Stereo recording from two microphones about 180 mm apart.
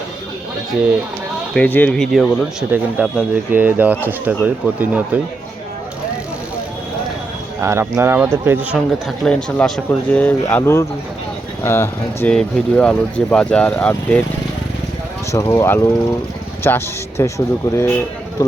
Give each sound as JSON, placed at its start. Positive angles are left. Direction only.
{"t": 1.5, "sound": "speech", "side_deg": 10}
{"t": 7.6, "sound": "speech", "side_deg": -15}
{"t": 9.0, "sound": "speech", "side_deg": 5}
{"t": 15.3, "sound": "speech", "side_deg": 15}